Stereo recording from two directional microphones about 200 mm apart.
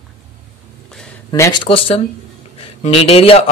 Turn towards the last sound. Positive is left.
turn(degrees=30)  # may be behind; listen again after turning